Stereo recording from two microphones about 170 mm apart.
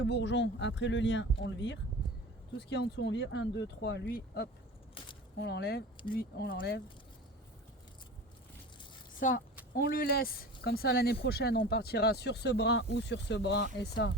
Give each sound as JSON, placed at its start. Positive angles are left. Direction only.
{"t": 0.0, "sound": "speech", "side_deg": 90}
{"t": 5.0, "sound": "a sound", "side_deg": 30}
{"t": 5.4, "sound": "speech", "side_deg": 80}
{"t": 9.7, "sound": "speech", "side_deg": 60}